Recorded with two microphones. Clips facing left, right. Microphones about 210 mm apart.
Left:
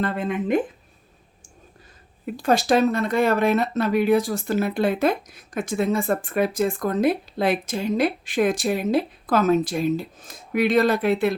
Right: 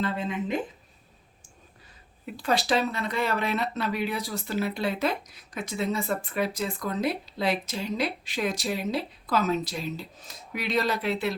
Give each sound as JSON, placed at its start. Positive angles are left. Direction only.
{"t": 0.0, "sound": "speech", "side_deg": 55}
{"t": 2.2, "sound": "speech", "side_deg": 45}